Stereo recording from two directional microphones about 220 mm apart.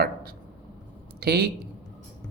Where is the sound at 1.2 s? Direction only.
45° right (ahead or behind).